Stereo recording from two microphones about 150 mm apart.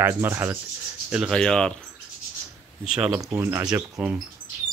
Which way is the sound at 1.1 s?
Centre (ahead or behind).